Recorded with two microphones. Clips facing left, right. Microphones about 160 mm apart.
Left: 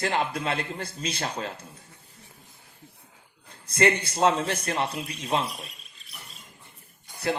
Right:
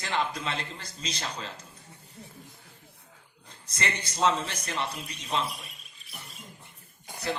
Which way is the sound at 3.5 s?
55° left (ahead or behind).